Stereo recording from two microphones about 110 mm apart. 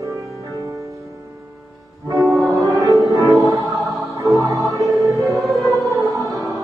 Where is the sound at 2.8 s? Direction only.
30° right (ahead or behind).